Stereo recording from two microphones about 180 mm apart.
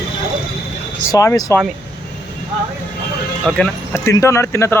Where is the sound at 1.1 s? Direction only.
20° left (ahead or behind).